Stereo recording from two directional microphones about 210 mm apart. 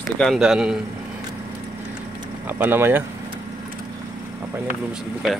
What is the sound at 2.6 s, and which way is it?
Speech, 10° right (ahead or behind).